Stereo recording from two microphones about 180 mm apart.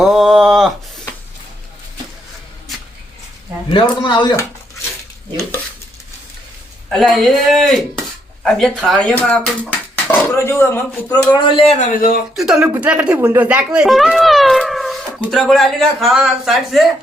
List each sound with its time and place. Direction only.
0.0 s a sound: centre (ahead or behind)
3.7 s speech: 25° left (ahead or behind)
6.9 s speech: centre (ahead or behind); by 11.3 s 15° left (ahead or behind)
11.3 s speech: 30° left (ahead or behind); by 12.2 s 50° left (ahead or behind)
12.4 s speech: 5° right (ahead or behind)